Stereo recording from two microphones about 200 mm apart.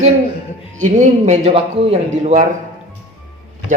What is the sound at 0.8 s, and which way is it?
Speech, 35° right (ahead or behind).